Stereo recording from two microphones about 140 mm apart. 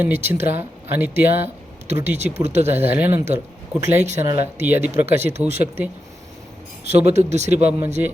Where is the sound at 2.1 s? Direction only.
50° right (ahead or behind).